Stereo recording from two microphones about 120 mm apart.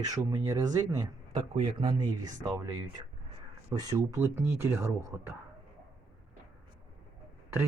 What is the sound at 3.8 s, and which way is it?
Speech, 30° right (ahead or behind).